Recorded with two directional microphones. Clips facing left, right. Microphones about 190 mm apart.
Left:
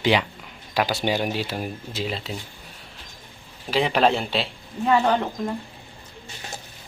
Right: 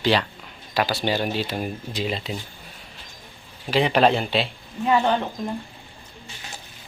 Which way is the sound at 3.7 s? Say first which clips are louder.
Right 2 dB; centre (ahead or behind).